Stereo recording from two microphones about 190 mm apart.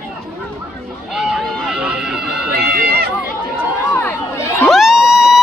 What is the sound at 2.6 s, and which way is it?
Run, 55° right (ahead or behind).